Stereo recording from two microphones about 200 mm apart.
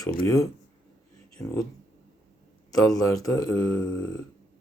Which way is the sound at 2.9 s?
15° left (ahead or behind).